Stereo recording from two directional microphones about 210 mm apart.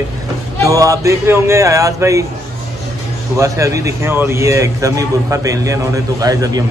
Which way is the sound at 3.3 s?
15° right (ahead or behind).